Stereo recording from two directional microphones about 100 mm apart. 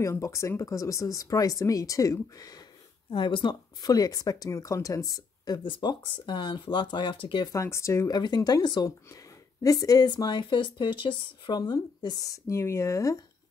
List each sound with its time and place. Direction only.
0.0 s speech: 30° left (ahead or behind)
3.1 s speech: 55° left (ahead or behind); by 5.6 s 40° left (ahead or behind)
5.6 s speech: 55° left (ahead or behind)
7.5 s speech: 30° left (ahead or behind)
8.1 s speech: 45° left (ahead or behind)